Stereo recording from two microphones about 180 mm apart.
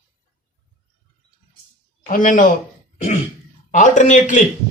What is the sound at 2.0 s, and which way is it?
Speech, 50° left (ahead or behind).